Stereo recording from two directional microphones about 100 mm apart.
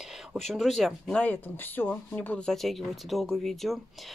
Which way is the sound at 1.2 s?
15° left (ahead or behind).